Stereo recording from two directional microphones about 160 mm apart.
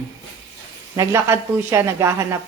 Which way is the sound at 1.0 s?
15° right (ahead or behind).